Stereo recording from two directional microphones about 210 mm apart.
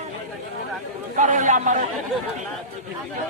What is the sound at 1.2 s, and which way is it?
Speech, 35° right (ahead or behind).